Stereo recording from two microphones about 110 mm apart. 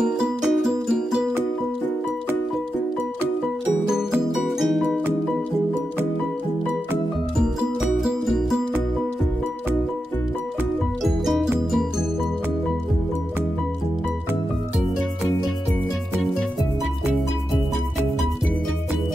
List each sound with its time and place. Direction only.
0.0 s music: centre (ahead or behind)
4.4 s music: centre (ahead or behind)
8.0 s music: centre (ahead or behind)
11.1 s music: centre (ahead or behind)